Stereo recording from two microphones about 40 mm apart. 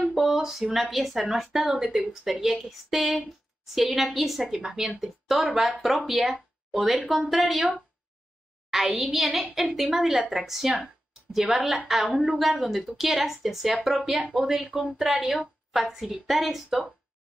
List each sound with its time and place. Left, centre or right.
0.1 s a woman's voice: centre
4.6 s a woman's voice: centre
8.6 s a woman's voice: centre
9.7 s speech: centre
9.9 s a woman's voice: centre
12.1 s a woman's voice: centre
12.4 s a woman's voice: centre
14.7 s speech: right
15.0 s a woman's voice: centre